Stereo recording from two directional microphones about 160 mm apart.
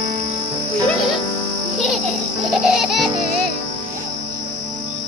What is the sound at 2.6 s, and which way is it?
Music, centre (ahead or behind).